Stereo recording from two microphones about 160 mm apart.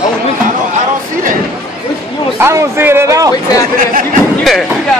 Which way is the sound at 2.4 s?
15° right (ahead or behind).